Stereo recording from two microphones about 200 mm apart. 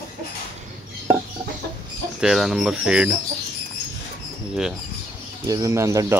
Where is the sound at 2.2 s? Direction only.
Centre (ahead or behind).